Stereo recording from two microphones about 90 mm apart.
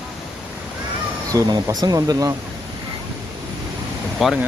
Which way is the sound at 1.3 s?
45° right (ahead or behind).